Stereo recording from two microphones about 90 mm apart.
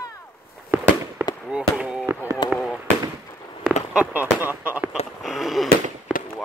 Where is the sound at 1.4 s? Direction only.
10° right (ahead or behind).